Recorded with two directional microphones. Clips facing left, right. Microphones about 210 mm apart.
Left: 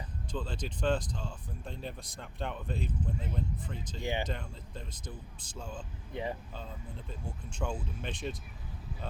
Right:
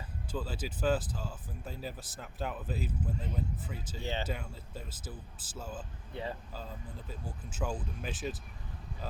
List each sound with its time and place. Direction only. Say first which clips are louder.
0.3 s speech: even; 5° right (ahead or behind)
4.0 s speech: left 3 dB; 15° left (ahead or behind)
4.3 s speech: even; 5° right (ahead or behind)
6.1 s speech: left 3 dB; 15° left (ahead or behind)
6.5 s speech: even; 5° right (ahead or behind)